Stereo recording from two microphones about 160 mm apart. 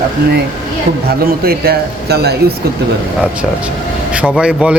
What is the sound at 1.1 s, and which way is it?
Speech, 75° right (ahead or behind).